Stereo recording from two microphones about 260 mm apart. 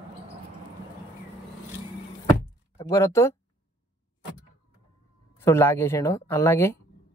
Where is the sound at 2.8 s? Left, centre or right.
Centre.